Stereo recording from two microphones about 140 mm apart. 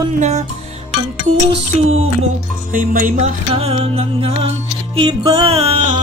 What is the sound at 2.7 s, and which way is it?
Music, 80° right.